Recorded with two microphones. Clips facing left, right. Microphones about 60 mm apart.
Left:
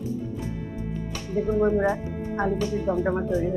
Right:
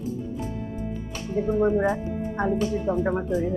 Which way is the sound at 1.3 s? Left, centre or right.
Right.